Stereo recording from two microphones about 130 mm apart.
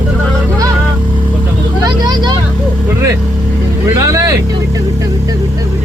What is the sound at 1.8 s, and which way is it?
Speech, 35° right (ahead or behind).